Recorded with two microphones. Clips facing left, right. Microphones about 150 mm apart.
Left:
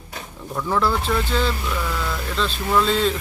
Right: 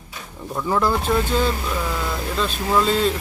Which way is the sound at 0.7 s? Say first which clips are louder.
Right 2 dB; 15° right (ahead or behind).